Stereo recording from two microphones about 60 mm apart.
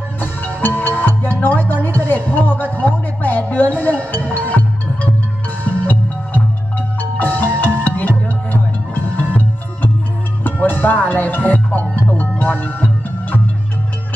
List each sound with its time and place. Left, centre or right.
0.2 s music: left
10.4 s music: left